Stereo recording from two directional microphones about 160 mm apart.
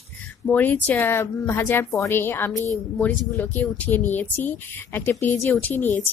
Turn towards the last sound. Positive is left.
turn(degrees=15)  # may be behind; listen again after turning